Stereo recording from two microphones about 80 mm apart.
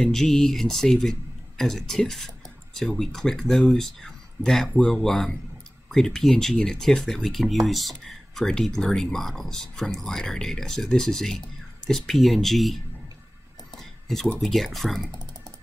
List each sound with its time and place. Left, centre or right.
0.1 s speech: centre
13.7 s a sound: centre
14.4 s speech: centre